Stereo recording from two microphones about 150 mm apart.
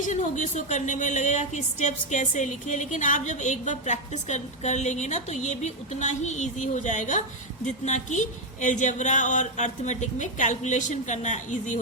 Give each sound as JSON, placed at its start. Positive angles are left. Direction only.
{"t": 0.0, "sound": "a woman's voice", "side_deg": 55}